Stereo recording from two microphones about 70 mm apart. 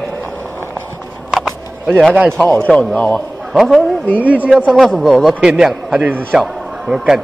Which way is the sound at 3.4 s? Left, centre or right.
Centre.